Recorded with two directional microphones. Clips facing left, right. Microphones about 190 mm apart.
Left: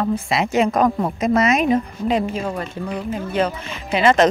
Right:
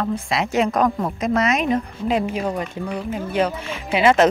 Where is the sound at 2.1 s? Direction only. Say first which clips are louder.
Right 1 dB; 10° right (ahead or behind).